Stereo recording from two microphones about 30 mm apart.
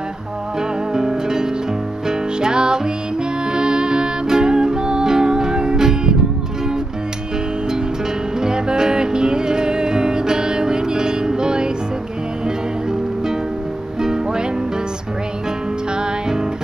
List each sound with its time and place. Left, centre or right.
0.6 s music: right
8.4 s music: right
14.0 s music: right
16.0 s music: right